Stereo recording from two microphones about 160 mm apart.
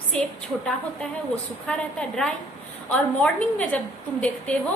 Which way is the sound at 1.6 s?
5° left (ahead or behind).